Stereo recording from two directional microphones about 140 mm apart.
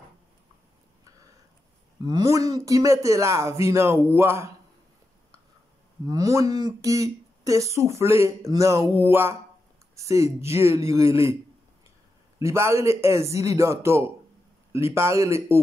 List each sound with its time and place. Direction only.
2.0 s speech: 25° right (ahead or behind)
6.0 s speech: 25° right (ahead or behind)
12.4 s speech: 20° right (ahead or behind)